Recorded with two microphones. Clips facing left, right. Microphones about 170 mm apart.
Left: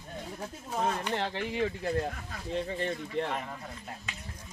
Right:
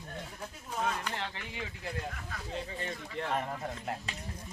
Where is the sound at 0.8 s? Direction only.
40° left (ahead or behind).